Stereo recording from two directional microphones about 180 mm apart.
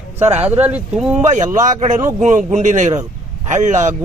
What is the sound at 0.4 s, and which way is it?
Speech, 10° right (ahead or behind).